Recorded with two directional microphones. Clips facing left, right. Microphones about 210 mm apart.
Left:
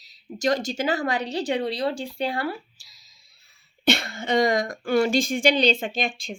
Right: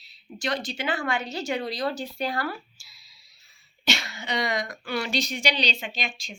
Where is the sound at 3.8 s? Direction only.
55° left (ahead or behind).